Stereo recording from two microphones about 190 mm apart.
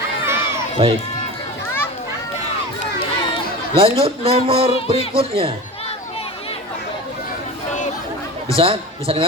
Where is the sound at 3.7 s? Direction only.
30° right (ahead or behind).